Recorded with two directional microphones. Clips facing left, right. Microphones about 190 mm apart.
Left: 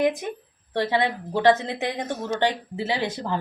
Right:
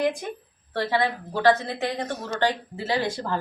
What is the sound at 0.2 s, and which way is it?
A woman's voice, 15° left (ahead or behind).